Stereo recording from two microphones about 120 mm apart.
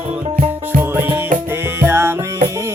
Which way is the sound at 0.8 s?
15° right (ahead or behind).